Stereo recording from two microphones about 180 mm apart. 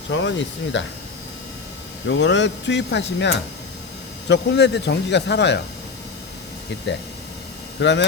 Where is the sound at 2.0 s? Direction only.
90° left; by 5.6 s 70° left (ahead or behind).